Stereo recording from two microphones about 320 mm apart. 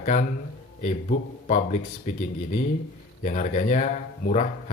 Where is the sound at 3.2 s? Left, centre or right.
Left.